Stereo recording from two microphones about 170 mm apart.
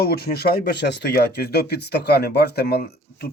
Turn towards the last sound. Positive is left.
turn(degrees=65)  # may be behind; listen again after turning